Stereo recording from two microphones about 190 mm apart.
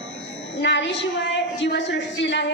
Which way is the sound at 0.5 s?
70° left (ahead or behind).